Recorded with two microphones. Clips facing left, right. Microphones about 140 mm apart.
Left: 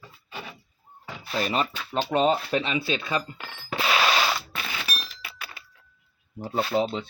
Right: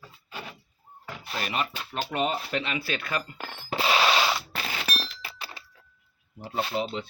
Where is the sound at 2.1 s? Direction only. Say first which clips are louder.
Left 6 dB; 25° left (ahead or behind).